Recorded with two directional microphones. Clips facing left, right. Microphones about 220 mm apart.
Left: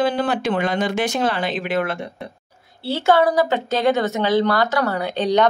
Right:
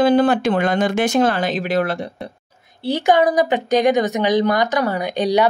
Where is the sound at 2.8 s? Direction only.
15° right (ahead or behind).